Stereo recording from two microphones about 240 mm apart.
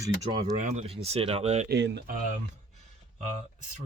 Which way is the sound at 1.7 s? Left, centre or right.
Right.